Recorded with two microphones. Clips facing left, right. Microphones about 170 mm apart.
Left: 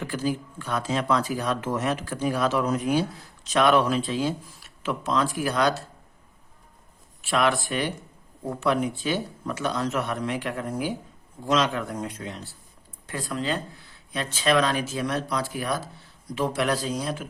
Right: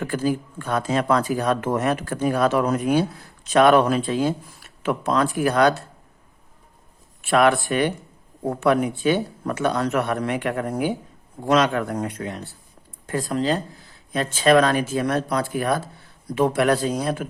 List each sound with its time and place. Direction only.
0.0 s speech: 50° right (ahead or behind)
7.2 s speech: 55° right (ahead or behind)
13.1 s speech: 45° right (ahead or behind)